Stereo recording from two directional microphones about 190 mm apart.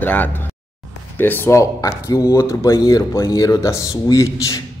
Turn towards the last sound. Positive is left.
turn(degrees=15)  # may be behind; listen again after turning